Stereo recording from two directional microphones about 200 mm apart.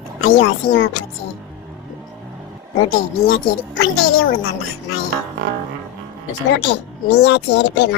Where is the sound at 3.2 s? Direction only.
90° left.